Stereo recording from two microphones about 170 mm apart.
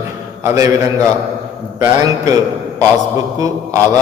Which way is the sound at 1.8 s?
20° right (ahead or behind).